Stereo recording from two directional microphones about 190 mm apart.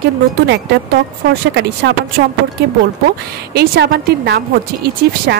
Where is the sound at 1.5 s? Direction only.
60° right (ahead or behind).